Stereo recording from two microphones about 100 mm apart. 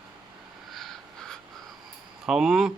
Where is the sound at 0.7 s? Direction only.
Centre (ahead or behind).